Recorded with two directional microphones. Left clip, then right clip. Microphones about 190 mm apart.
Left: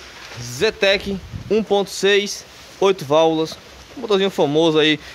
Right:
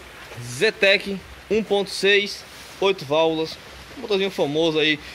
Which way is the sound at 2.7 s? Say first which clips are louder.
Left 4 dB; 40° left (ahead or behind).